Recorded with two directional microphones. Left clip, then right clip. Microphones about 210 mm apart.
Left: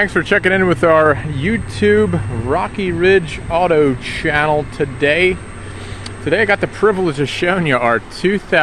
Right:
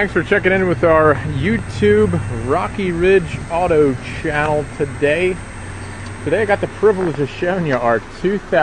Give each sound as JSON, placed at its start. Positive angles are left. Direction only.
{"t": 0.0, "sound": "speech", "side_deg": 15}
{"t": 1.4, "sound": "speech", "side_deg": 5}
{"t": 6.3, "sound": "speech", "side_deg": 25}